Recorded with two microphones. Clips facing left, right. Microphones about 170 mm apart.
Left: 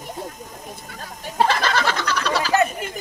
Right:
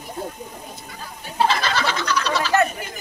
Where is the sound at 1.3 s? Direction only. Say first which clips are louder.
Left 1 dB; 50° left (ahead or behind).